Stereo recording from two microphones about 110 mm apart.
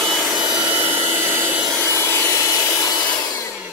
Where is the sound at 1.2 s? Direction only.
20° right (ahead or behind).